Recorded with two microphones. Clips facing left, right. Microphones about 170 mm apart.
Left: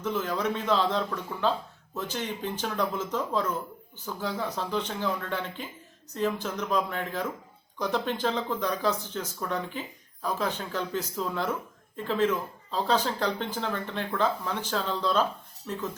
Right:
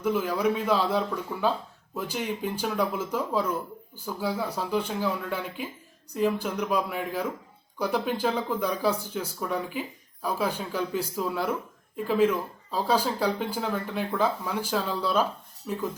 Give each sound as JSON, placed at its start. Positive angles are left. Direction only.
{"t": 0.0, "sound": "speech", "side_deg": -10}